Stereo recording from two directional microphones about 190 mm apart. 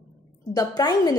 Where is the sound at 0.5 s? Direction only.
20° left (ahead or behind).